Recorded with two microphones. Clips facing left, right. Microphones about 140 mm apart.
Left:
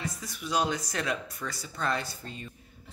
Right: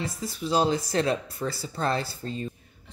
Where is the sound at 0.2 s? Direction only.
30° right (ahead or behind).